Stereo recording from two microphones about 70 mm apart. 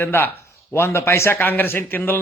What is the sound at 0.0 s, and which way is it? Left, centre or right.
A man's voice, left.